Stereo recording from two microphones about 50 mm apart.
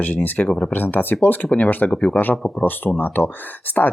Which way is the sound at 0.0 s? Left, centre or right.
Left.